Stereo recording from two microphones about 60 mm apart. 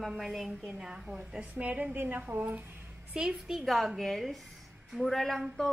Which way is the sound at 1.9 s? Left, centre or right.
Right.